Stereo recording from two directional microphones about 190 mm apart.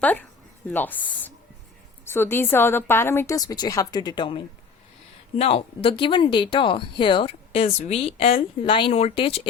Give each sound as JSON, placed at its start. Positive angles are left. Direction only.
{"t": 0.0, "sound": "a woman's voice", "side_deg": 10}
{"t": 2.0, "sound": "a woman's voice", "side_deg": 10}